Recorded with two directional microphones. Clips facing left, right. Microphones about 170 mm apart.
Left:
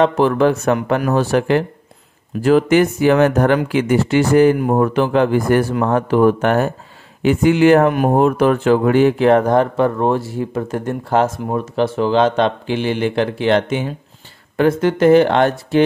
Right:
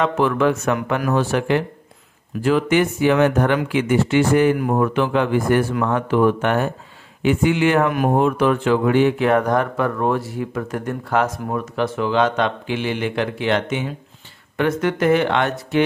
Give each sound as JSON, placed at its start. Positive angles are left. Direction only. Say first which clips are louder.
{"t": 0.0, "sound": "speech", "louder": "left 4 dB", "side_deg": 35}